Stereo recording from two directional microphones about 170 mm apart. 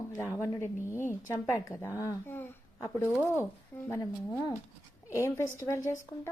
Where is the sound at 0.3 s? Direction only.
15° left (ahead or behind).